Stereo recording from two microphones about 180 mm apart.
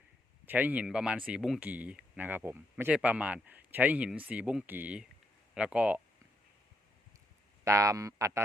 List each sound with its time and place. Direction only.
0.4 s speech: 10° right (ahead or behind)
7.6 s speech: 15° right (ahead or behind)